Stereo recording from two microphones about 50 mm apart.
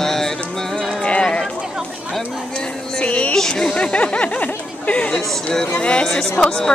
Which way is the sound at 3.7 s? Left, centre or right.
Left.